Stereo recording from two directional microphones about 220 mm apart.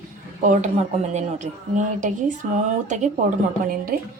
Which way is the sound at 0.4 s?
35° right (ahead or behind).